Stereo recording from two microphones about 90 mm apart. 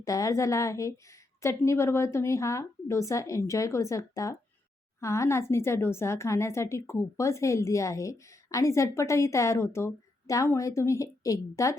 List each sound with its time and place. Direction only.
0.0 s a woman's voice: 40° left (ahead or behind)